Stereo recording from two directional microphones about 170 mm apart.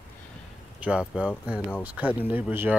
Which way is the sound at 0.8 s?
5° right (ahead or behind).